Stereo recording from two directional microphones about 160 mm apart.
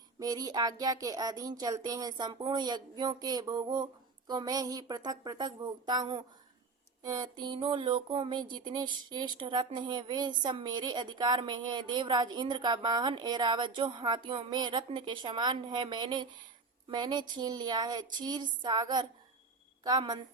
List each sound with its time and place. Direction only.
0.2 s speech: 25° right (ahead or behind)